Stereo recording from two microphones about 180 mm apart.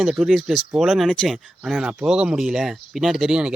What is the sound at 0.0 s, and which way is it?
Speech, centre (ahead or behind).